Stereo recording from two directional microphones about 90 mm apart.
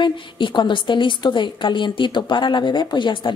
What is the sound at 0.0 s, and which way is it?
A woman's voice, 60° left (ahead or behind).